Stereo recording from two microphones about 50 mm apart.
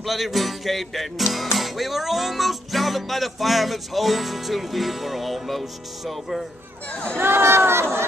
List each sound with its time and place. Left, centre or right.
0.0 s music: centre
6.9 s speech: left
7.2 s speech: right